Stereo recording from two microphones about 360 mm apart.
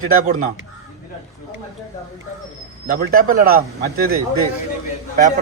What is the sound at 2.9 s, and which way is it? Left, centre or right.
Speech, right.